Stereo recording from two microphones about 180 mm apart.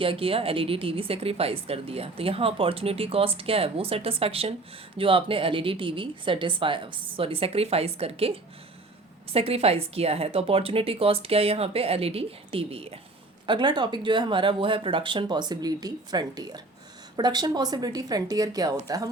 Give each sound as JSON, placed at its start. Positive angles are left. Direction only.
{"t": 0.0, "sound": "a woman's voice", "side_deg": -30}